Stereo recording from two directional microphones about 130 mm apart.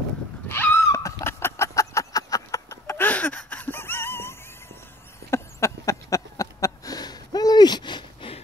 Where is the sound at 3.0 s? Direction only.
10° left (ahead or behind).